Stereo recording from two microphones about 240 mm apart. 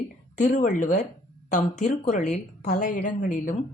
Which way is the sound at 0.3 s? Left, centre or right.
Left.